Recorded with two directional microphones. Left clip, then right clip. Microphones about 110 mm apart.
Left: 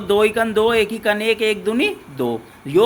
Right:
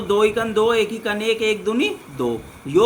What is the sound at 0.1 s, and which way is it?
Speech, 50° left (ahead or behind).